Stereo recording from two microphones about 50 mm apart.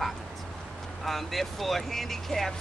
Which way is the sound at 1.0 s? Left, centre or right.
Centre.